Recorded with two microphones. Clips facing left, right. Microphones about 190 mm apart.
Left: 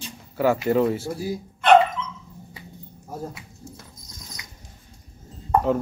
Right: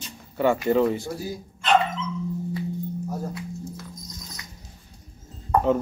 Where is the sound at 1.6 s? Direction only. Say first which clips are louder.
Left 6 dB; 60° left (ahead or behind).